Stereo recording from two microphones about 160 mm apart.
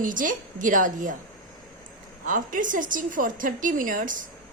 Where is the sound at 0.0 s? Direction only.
55° right (ahead or behind).